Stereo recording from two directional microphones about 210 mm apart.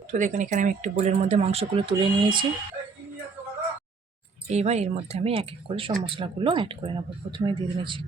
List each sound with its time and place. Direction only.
0.1 s speech: 35° right (ahead or behind); by 2.5 s 20° right (ahead or behind)
4.4 s speech: 30° right (ahead or behind)